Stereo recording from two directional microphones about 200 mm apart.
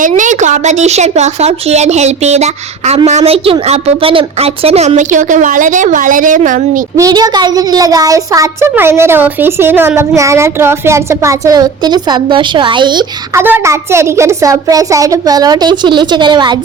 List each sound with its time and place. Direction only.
0.1 s a woman's voice: 35° right (ahead or behind)
6.9 s a child's voice: 20° right (ahead or behind)
13.4 s a child's voice: 10° right (ahead or behind)